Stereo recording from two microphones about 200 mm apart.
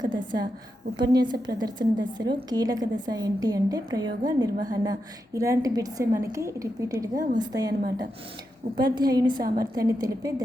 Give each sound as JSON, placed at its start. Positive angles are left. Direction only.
{"t": 0.9, "sound": "a woman's voice", "side_deg": -20}